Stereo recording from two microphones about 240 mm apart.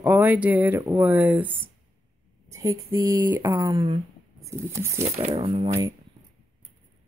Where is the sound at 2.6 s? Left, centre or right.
Centre.